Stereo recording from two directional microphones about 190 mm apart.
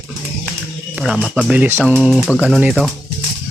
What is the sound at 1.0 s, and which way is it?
Speech, 5° right (ahead or behind).